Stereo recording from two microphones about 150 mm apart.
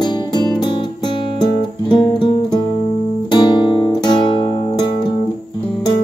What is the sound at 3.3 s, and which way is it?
Guitar, 30° left (ahead or behind).